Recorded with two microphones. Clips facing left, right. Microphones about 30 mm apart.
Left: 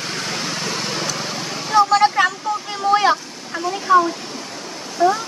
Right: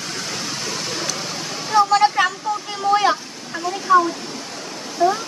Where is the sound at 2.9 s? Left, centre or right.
Centre.